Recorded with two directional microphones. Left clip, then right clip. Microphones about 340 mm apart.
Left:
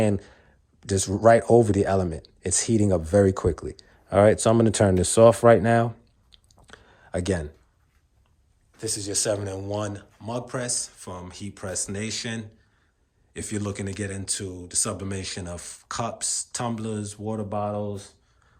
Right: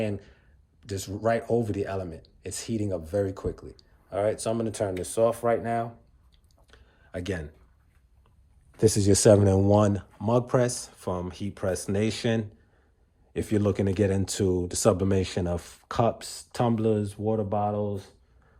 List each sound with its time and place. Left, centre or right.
0.0 s speech: centre
6.3 s chewing: centre
8.8 s speech: centre